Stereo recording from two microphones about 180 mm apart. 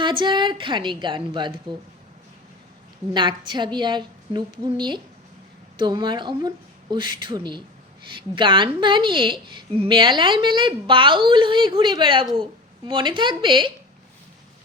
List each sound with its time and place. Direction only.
0.0 s a woman's voice: 25° right (ahead or behind)
3.1 s a woman's voice: 25° right (ahead or behind)